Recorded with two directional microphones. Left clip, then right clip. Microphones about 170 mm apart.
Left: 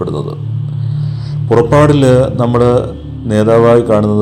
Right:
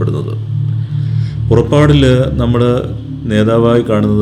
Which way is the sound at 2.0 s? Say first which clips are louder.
Left 3 dB; 30° right (ahead or behind).